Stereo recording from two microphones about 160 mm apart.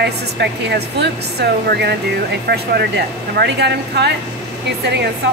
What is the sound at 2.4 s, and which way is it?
Speech, 80° right.